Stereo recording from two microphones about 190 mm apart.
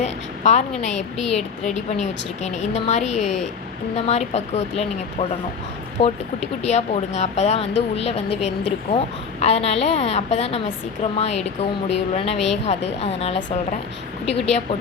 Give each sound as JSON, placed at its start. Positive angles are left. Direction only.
{"t": 0.0, "sound": "a sound", "side_deg": 40}
{"t": 0.8, "sound": "speech", "side_deg": 40}
{"t": 6.0, "sound": "speech", "side_deg": 35}
{"t": 9.4, "sound": "speech", "side_deg": 35}